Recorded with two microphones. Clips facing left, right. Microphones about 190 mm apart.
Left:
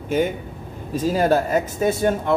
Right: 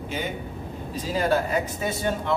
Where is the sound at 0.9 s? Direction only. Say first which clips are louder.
Left 6 dB; 45° left (ahead or behind).